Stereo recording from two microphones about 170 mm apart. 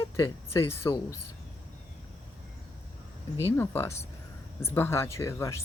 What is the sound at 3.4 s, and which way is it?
Speech, 15° left (ahead or behind).